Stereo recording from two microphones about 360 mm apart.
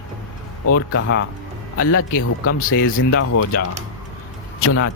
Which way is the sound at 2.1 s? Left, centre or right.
Left.